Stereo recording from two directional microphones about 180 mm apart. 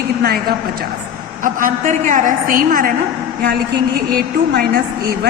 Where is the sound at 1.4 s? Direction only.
50° right (ahead or behind).